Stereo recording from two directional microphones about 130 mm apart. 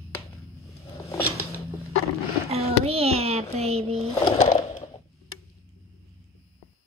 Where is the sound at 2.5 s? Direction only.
50° right (ahead or behind).